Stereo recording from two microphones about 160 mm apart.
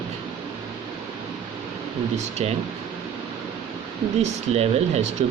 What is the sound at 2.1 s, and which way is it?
Speech, 40° right (ahead or behind).